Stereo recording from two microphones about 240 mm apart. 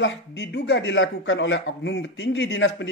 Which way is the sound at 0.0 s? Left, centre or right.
Left.